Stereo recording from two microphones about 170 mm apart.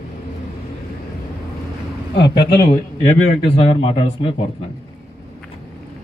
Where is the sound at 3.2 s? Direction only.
35° left (ahead or behind).